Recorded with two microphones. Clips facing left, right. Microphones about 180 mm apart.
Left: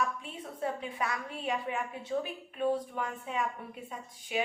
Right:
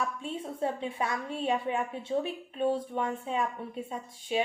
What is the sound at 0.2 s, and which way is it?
A woman's voice, 30° right (ahead or behind).